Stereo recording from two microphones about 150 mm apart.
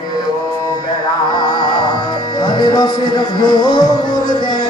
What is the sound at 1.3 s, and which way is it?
Music, 30° left (ahead or behind).